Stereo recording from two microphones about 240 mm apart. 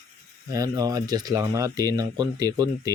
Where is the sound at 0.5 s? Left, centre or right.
Centre.